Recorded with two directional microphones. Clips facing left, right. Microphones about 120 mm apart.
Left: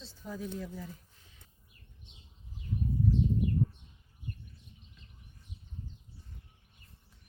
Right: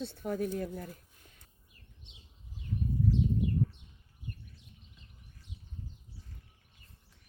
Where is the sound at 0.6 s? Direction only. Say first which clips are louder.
Right 4 dB; 55° right (ahead or behind).